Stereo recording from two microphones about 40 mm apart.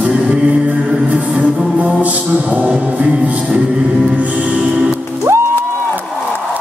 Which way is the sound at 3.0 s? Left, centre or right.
Right.